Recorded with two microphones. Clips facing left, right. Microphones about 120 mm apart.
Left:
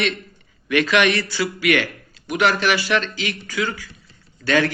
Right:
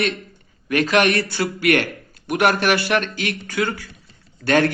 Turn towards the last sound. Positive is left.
turn(degrees=-55)  # may be behind; listen again after turning